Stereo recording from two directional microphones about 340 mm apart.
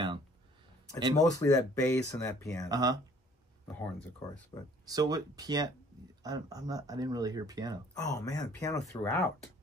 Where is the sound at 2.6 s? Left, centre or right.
Centre.